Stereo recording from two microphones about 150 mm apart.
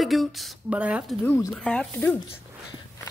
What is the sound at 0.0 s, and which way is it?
Speech, centre (ahead or behind).